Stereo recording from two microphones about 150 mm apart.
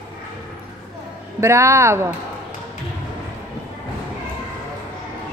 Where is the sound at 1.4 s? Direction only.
20° right (ahead or behind).